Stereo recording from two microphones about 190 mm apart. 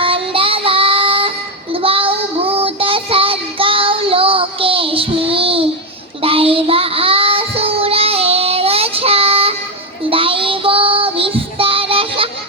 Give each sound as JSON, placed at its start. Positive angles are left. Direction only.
{"t": 0.0, "sound": "child singing", "side_deg": -30}